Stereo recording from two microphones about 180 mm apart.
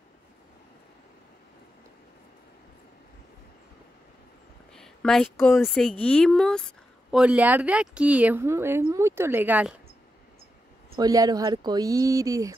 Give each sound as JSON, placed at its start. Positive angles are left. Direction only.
{"t": 4.7, "sound": "a woman's voice", "side_deg": 5}
{"t": 11.0, "sound": "speech", "side_deg": -20}